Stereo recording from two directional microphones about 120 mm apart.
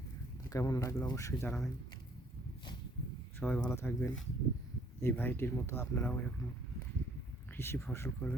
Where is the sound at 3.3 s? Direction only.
10° left (ahead or behind).